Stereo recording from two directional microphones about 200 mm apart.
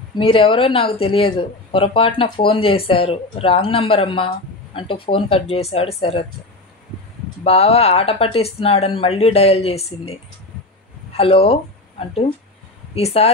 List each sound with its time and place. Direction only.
0.2 s speech: 25° left (ahead or behind)
7.4 s speech: 30° left (ahead or behind)
11.1 s speech: 30° left (ahead or behind)